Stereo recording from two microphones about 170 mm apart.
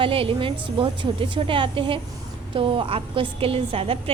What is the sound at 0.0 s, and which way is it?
A woman's voice, 30° right (ahead or behind).